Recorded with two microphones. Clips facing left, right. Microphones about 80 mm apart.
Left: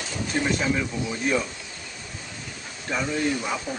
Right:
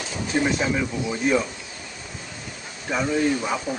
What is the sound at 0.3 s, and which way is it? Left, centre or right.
Speech, centre.